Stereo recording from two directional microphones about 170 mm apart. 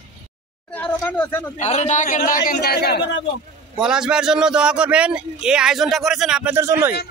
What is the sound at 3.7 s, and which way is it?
A man's voice, 5° right (ahead or behind).